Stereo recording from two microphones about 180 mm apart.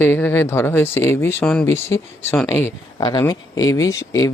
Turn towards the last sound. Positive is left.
turn(degrees=20)  # may be behind; listen again after turning